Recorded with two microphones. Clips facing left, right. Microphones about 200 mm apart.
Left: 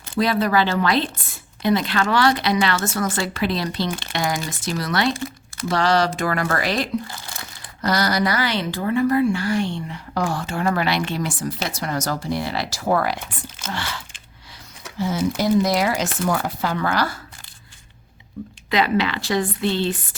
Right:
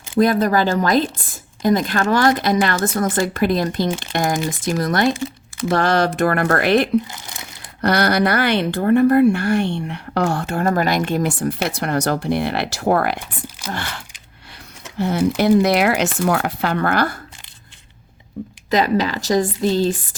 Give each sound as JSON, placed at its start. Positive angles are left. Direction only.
{"t": 0.1, "sound": "a woman's voice", "side_deg": -50}
{"t": 7.1, "sound": "speech", "side_deg": -20}
{"t": 7.8, "sound": "speech", "side_deg": -60}
{"t": 10.5, "sound": "a woman's voice", "side_deg": -45}
{"t": 18.7, "sound": "a woman's voice", "side_deg": -40}